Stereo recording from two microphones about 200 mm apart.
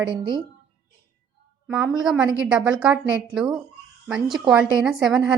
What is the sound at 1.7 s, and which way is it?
A woman's voice, 5° right (ahead or behind).